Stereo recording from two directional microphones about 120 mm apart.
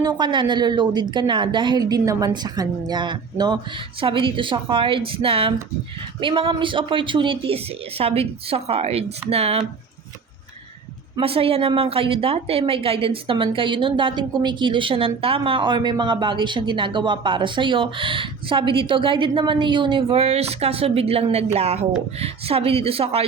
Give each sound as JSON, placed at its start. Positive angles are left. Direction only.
{"t": 0.0, "sound": "a woman's voice", "side_deg": -35}
{"t": 4.0, "sound": "a woman's voice", "side_deg": -45}
{"t": 11.2, "sound": "a woman's voice", "side_deg": -50}